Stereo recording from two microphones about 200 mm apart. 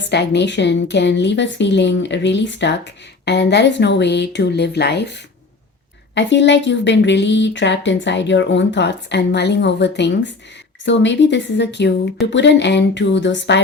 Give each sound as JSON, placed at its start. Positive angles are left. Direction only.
{"t": 0.1, "sound": "a woman's voice", "side_deg": 60}